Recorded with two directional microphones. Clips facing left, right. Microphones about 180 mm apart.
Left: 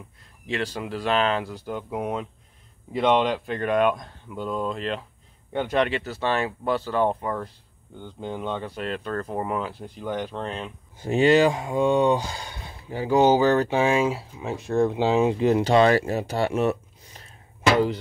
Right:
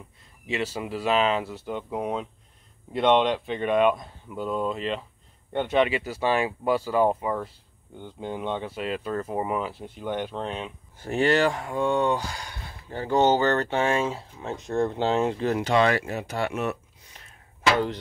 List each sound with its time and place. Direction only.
0.5 s speech: 5° right (ahead or behind)
11.0 s speech: 15° left (ahead or behind)
12.9 s speech: 10° left (ahead or behind)
15.6 s speech: 35° left (ahead or behind)